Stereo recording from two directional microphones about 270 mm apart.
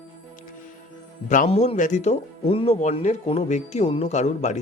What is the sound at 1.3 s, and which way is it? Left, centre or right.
Speech, left.